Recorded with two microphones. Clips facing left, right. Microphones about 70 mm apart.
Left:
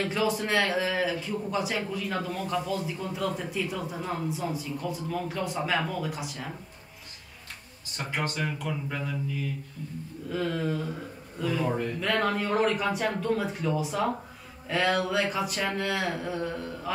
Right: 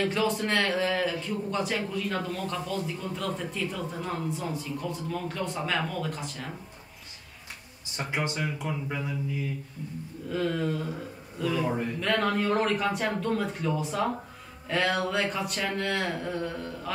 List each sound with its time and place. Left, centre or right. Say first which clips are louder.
0.0 s a man's voice: right 1 dB; centre
8.1 s speech: even; centre
10.3 s a man's voice: right 1 dB; centre